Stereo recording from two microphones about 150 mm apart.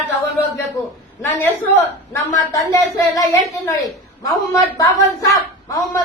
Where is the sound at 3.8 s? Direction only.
25° left (ahead or behind).